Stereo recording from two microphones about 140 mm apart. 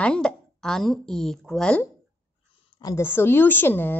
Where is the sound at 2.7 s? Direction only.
25° left (ahead or behind).